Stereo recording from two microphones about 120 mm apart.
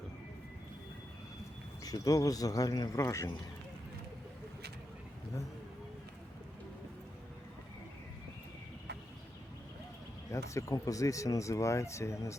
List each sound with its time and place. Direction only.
1.8 s speech: 30° left (ahead or behind)
10.3 s speech: 25° left (ahead or behind)